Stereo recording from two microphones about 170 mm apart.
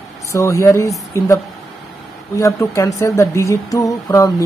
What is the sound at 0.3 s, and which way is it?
Speech, 15° left (ahead or behind).